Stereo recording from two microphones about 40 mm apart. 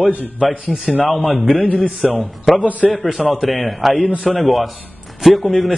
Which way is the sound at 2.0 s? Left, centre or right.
Centre.